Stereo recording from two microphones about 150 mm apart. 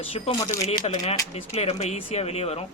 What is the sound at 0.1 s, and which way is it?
Speech, 35° left (ahead or behind).